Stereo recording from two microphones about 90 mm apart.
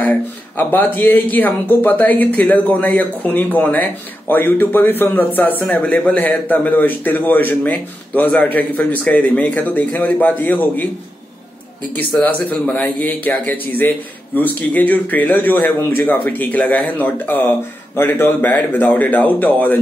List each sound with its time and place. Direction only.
0.0 s speech: 20° left (ahead or behind)
11.9 s speech: 15° left (ahead or behind)